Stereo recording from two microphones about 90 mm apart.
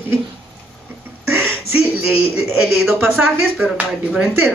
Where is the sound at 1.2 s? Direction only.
25° right (ahead or behind).